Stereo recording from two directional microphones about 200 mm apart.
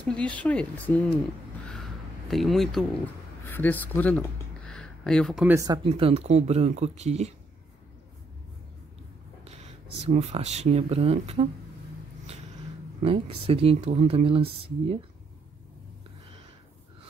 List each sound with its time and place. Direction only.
0.0 s speech: 5° left (ahead or behind)
1.7 s a sound: centre (ahead or behind)
3.4 s speech: 10° left (ahead or behind)
5.9 s speech: 30° right (ahead or behind)
10.0 s speech: 30° right (ahead or behind)
13.0 s speech: 30° right (ahead or behind)